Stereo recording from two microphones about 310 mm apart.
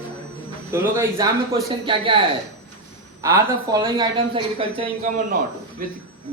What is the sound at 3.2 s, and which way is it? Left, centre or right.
A man's voice, centre.